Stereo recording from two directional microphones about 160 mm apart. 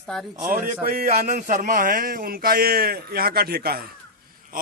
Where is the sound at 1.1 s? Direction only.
50° right (ahead or behind); by 3.9 s 70° right (ahead or behind).